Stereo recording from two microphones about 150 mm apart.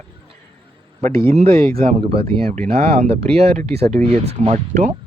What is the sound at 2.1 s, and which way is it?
Speech, 40° right (ahead or behind).